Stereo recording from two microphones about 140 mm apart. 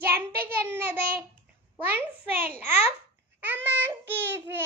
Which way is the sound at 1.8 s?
15° right (ahead or behind).